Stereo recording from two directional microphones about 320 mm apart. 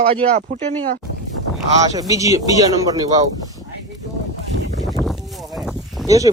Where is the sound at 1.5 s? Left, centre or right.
Centre.